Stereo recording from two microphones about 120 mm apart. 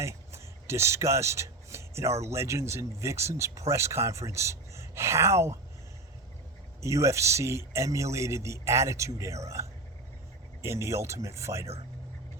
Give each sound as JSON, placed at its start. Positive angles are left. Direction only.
{"t": 0.0, "sound": "a sound", "side_deg": -25}
{"t": 2.2, "sound": "speech", "side_deg": -25}
{"t": 6.8, "sound": "speech", "side_deg": -25}
{"t": 10.6, "sound": "speech", "side_deg": -25}